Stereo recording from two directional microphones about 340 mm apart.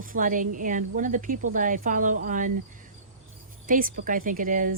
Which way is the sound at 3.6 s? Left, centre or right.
Right.